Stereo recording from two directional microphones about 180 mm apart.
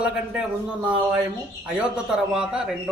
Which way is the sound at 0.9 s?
5° right (ahead or behind).